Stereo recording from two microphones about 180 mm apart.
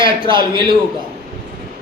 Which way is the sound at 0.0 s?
30° right (ahead or behind).